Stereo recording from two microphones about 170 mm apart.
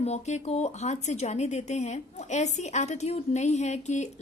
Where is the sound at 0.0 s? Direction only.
40° left (ahead or behind).